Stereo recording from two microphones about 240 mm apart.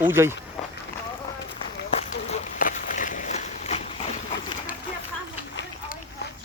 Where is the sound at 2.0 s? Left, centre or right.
Left.